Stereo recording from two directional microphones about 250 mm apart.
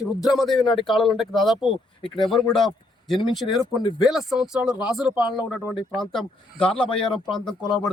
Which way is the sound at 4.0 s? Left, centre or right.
Centre.